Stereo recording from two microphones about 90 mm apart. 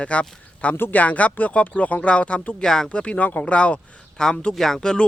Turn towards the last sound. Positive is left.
turn(degrees=10)  # may be behind; listen again after turning